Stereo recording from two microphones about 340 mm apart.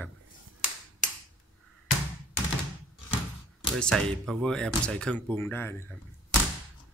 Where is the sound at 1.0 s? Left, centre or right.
Left.